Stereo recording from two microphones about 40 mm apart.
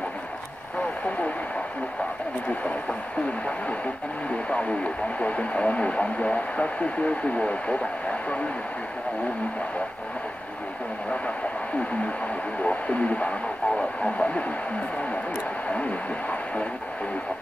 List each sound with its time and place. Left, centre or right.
4.5 s speech: left
12.6 s speech: left
15.7 s speech: left